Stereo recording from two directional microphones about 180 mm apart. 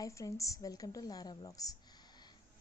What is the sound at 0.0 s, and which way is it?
A woman's voice, 20° left (ahead or behind).